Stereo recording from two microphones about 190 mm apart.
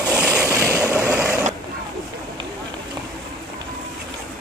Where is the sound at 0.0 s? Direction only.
5° right (ahead or behind).